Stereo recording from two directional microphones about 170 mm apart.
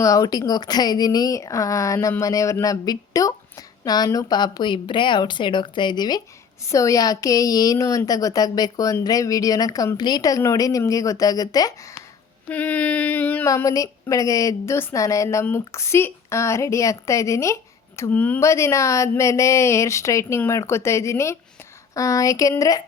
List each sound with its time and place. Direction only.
0.0 s a woman's voice: 20° left (ahead or behind)
12.5 s a woman's voice: 10° left (ahead or behind)